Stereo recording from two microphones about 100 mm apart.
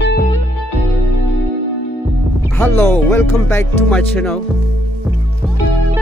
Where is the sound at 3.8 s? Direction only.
10° left (ahead or behind).